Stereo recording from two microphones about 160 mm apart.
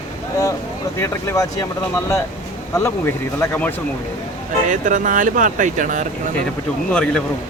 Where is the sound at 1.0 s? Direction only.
20° left (ahead or behind).